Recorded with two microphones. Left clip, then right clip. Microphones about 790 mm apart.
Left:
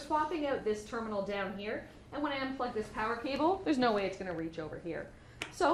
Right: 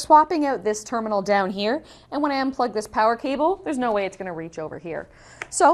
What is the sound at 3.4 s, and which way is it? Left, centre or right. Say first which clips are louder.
A woman's voice: right 7 dB; right.